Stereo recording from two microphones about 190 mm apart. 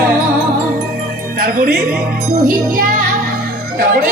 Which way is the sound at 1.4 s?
50° right (ahead or behind).